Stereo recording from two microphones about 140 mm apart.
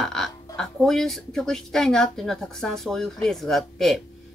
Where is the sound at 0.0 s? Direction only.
5° left (ahead or behind).